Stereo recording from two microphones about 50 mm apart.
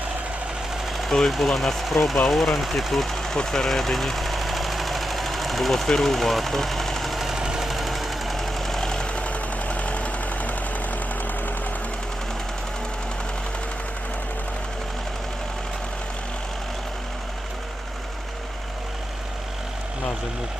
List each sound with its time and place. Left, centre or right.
1.1 s sewing machine: centre
9.1 s engine knocking: left